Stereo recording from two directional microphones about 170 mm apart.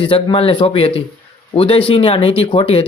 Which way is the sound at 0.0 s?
30° left (ahead or behind).